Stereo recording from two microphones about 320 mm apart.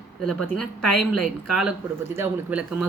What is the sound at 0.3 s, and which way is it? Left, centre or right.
Speech, centre.